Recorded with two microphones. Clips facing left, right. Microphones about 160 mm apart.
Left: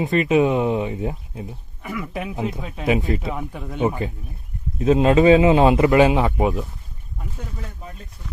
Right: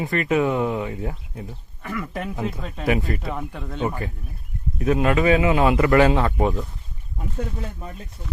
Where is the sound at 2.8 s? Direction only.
20° left (ahead or behind).